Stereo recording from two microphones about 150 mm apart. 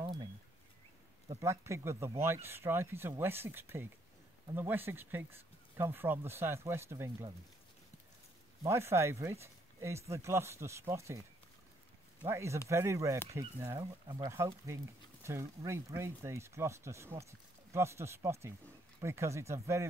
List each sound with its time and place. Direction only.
0.0 s a sound: 30° right (ahead or behind)
1.4 s speech: 20° right (ahead or behind)
8.6 s speech: 15° right (ahead or behind)